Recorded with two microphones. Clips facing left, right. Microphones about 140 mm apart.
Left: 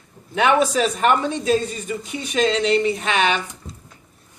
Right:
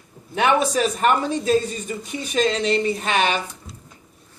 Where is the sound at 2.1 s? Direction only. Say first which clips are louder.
Left 1 dB; 40° right (ahead or behind).